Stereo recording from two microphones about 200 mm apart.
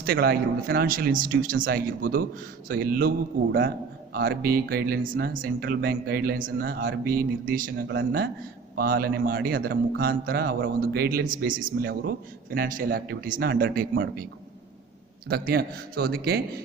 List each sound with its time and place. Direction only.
0.0 s speech: 50° right (ahead or behind)
4.1 s speech: 50° right (ahead or behind)
7.9 s speech: 60° right (ahead or behind)
15.3 s speech: 50° right (ahead or behind)